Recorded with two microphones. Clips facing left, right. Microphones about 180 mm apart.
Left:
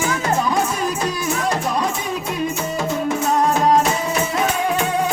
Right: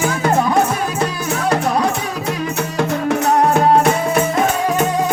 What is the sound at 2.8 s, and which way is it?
Music, 65° right (ahead or behind).